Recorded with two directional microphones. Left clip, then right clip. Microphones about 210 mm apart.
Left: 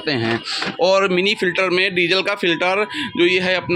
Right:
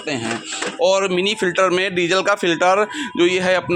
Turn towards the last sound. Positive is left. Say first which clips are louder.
# even
turn(degrees=5)  # may be behind; listen again after turning